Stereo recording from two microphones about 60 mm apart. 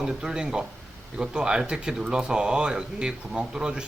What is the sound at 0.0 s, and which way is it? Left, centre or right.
Speech, centre.